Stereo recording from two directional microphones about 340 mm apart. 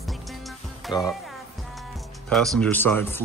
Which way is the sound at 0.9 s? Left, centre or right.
Centre.